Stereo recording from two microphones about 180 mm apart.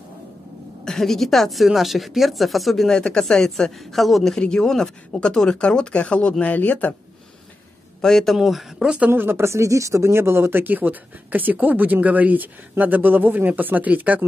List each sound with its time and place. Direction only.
0.8 s speech: centre (ahead or behind)
8.0 s speech: 5° left (ahead or behind)